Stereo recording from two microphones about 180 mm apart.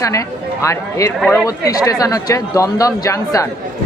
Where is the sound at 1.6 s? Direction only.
20° left (ahead or behind).